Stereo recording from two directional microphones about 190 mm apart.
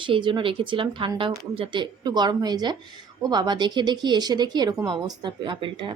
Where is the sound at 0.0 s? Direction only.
25° right (ahead or behind).